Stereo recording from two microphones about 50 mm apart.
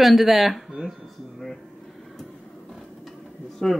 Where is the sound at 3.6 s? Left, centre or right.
Centre.